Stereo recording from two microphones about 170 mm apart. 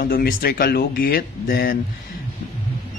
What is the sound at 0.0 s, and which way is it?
Speech, 60° left (ahead or behind).